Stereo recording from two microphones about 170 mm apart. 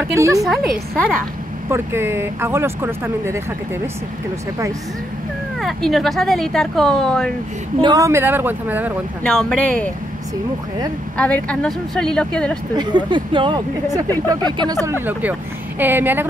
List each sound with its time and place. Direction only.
0.1 s speech: 15° right (ahead or behind)
0.4 s speech: centre (ahead or behind)
1.7 s speech: 15° right (ahead or behind)
5.6 s speech: centre (ahead or behind)
7.8 s speech: 20° right (ahead or behind)
9.2 s speech: 5° left (ahead or behind)
11.1 s speech: 5° left (ahead or behind)
12.7 s speech: 25° right (ahead or behind)